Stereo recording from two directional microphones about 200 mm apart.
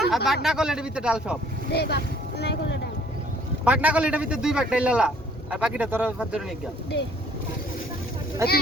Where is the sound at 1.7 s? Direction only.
55° left (ahead or behind).